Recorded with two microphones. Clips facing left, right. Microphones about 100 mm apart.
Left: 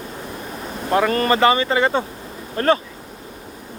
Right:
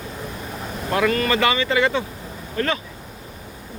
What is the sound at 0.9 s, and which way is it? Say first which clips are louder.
Speech: left 3 dB; 35° left (ahead or behind).